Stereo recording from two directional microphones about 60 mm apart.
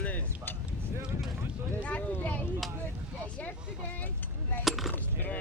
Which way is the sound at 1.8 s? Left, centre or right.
Left.